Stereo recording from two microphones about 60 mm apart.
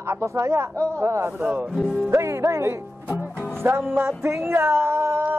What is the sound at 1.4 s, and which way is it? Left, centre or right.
Music, right.